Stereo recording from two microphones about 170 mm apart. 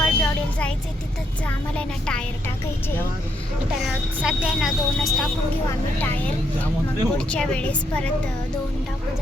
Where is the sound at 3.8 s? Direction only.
5° right (ahead or behind).